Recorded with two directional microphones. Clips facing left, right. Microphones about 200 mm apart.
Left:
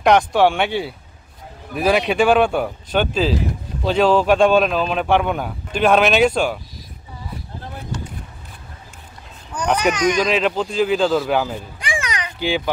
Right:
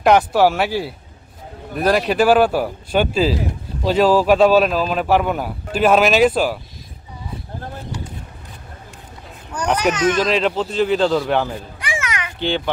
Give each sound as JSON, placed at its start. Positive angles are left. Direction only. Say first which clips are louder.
{"t": 0.0, "sound": "speech", "louder": "right 1 dB", "side_deg": -5}
{"t": 9.5, "sound": "speech", "louder": "even", "side_deg": -10}
{"t": 11.9, "sound": "children playing", "louder": "even", "side_deg": 15}
{"t": 12.4, "sound": "a child's voice", "louder": "even", "side_deg": 5}